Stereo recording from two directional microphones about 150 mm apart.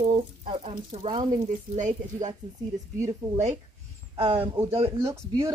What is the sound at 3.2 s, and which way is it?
Speech, 40° right (ahead or behind).